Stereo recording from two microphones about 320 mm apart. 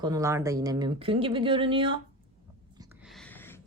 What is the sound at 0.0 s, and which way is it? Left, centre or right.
A woman's voice, centre.